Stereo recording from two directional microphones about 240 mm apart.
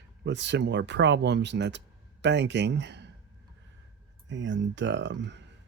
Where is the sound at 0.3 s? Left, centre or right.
Right.